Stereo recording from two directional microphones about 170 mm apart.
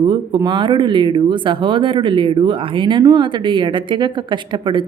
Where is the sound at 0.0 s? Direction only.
25° right (ahead or behind).